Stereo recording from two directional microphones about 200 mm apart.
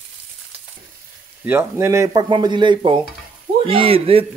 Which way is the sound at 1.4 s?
10° right (ahead or behind).